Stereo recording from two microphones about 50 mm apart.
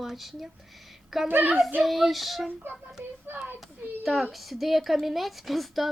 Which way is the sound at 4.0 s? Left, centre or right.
Centre.